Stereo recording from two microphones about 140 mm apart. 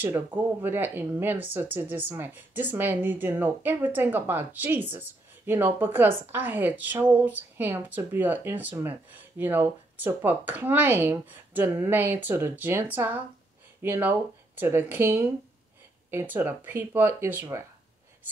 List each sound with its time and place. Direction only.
0.0 s a woman's voice: 10° right (ahead or behind)